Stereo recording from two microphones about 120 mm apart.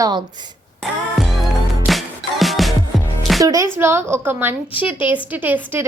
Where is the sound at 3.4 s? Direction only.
30° right (ahead or behind).